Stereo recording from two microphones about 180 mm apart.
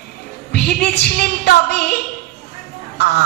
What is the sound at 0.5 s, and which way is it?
Speech, 65° left (ahead or behind).